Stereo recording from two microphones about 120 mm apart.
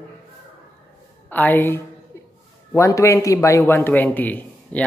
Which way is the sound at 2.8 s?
25° left (ahead or behind).